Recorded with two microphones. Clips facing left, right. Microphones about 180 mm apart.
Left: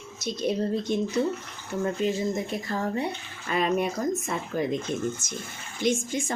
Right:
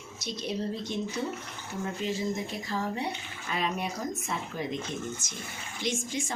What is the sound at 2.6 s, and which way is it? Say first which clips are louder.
Speech: left 2 dB; 50° left (ahead or behind).